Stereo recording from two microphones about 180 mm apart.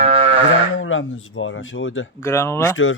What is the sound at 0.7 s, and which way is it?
Speech, 90° left.